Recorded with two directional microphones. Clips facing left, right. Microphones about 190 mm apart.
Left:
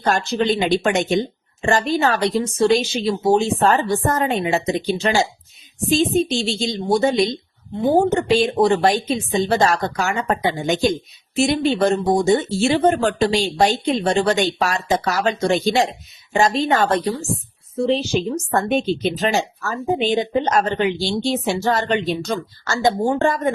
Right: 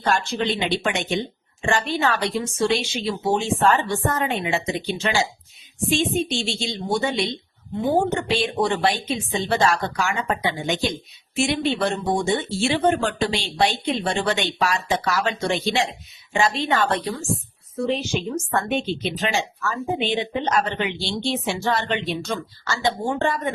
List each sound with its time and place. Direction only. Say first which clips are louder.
0.0 s speech: left 4 dB; 40° left (ahead or behind)